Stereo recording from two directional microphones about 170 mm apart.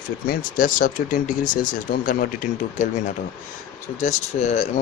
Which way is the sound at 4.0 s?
45° left (ahead or behind).